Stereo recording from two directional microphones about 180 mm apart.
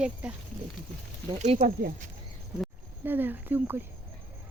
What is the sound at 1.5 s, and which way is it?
Speech, 55° right (ahead or behind).